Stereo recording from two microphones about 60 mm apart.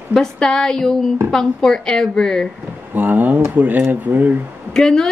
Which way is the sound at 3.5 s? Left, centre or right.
Right.